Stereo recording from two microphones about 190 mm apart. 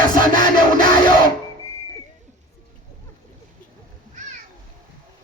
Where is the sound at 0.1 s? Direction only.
45° right (ahead or behind).